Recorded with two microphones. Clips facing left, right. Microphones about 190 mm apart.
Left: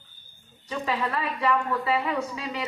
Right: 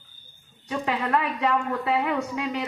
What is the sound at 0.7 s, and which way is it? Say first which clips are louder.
A woman's voice: right 3 dB; 65° right (ahead or behind).